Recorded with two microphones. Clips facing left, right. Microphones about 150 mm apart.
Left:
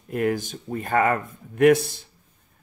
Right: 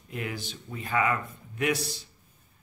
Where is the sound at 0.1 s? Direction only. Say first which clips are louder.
Left 11 dB; 50° left (ahead or behind).